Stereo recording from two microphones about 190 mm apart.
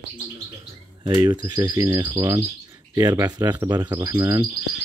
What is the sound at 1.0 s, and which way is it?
Speech, 20° right (ahead or behind).